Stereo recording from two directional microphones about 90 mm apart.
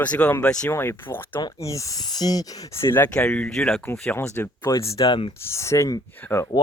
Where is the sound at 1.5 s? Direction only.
35° left (ahead or behind).